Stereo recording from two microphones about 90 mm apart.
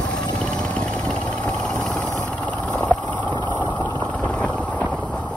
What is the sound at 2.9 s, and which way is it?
Vehicle, 15° left (ahead or behind).